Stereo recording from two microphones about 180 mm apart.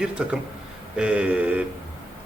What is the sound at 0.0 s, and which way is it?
A man's voice, 5° right (ahead or behind).